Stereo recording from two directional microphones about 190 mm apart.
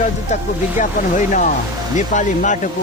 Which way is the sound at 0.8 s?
40° left (ahead or behind).